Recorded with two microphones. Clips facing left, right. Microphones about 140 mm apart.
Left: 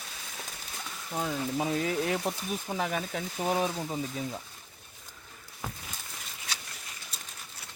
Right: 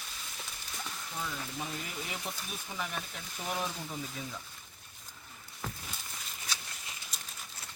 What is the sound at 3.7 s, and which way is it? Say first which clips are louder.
Speech: left 7 dB; 40° left (ahead or behind).